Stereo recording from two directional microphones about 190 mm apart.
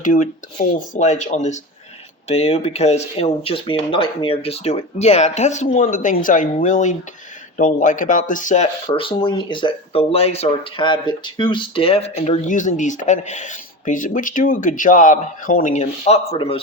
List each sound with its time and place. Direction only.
0.0 s speech: 45° left (ahead or behind)
8.9 s speech: 25° left (ahead or behind)